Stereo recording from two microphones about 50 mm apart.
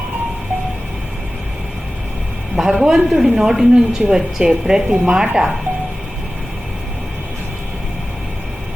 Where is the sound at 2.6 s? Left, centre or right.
Centre.